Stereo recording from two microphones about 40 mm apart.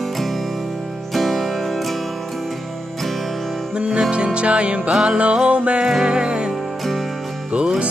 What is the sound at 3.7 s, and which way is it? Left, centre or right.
Music, right.